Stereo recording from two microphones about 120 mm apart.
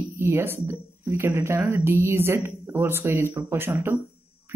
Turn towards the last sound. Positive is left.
turn(degrees=-20)  # may be behind; listen again after turning